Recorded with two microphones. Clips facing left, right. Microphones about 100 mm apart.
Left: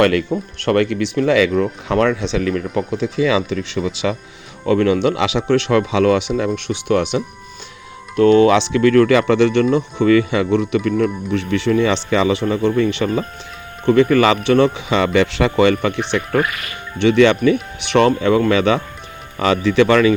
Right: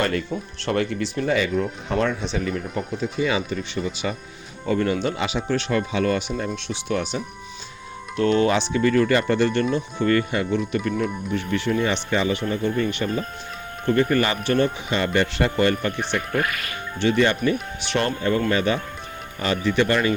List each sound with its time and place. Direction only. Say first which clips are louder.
0.0 s speech: left 9 dB; 75° left (ahead or behind)
0.3 s speech: left 7 dB; 60° left (ahead or behind); by 1.6 s 90° left
1.9 s speech: left 7 dB; 70° left (ahead or behind); by 4.2 s 90° left
4.6 s speech: left 7 dB; 75° left (ahead or behind)
6.7 s speech: left 8 dB; 65° left (ahead or behind)
8.1 s speech: left 8 dB; 55° left (ahead or behind)
17.0 s speech: left 7 dB; 80° left
18.2 s speech: left 7 dB; 90° left